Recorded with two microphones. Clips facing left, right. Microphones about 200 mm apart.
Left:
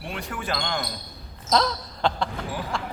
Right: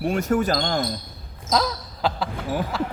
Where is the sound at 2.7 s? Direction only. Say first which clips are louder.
Right 5 dB; 5° right (ahead or behind).